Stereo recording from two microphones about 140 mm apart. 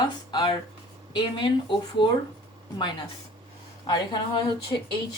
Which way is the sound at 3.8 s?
30° left (ahead or behind).